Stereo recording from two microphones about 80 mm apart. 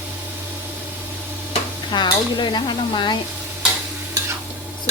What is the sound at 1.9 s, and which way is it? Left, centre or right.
Stir, left.